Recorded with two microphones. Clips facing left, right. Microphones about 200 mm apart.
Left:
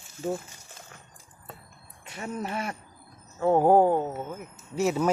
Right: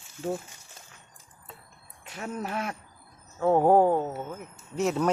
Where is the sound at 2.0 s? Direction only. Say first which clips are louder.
Left 1 dB; centre (ahead or behind).